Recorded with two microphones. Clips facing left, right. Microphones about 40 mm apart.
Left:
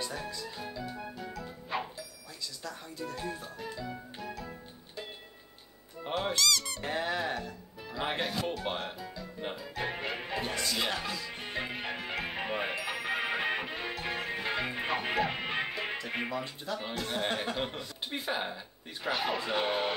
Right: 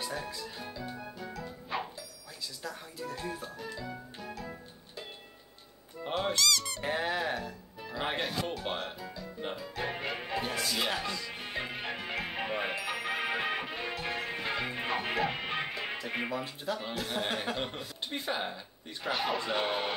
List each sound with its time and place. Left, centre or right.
0.0 s speech: centre
0.7 s music: centre
6.0 s music: centre
16.8 s speech: centre